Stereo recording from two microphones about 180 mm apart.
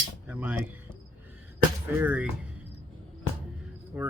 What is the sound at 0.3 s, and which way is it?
Speech, 10° right (ahead or behind).